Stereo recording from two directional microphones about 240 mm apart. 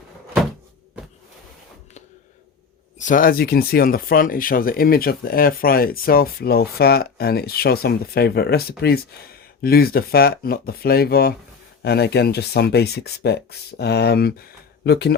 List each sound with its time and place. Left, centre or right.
3.0 s speech: left